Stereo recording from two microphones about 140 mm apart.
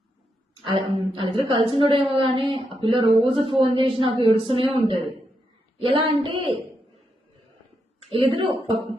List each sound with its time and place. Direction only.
0.6 s speech: 35° right (ahead or behind)
8.1 s speech: 40° right (ahead or behind)